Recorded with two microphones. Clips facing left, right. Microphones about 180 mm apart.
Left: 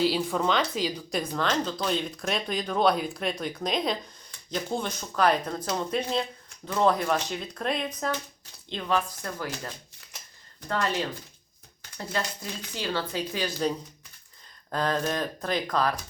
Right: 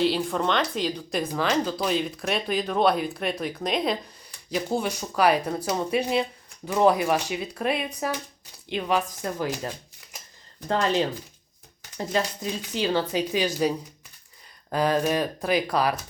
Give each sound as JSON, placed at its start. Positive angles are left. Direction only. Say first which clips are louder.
{"t": 0.0, "sound": "speech", "louder": "right 1 dB", "side_deg": 0}